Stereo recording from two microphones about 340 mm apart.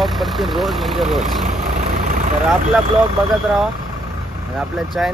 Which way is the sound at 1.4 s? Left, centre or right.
Right.